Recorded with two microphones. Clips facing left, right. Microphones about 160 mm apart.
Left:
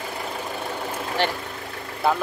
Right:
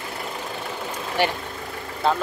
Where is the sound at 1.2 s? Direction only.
10° right (ahead or behind).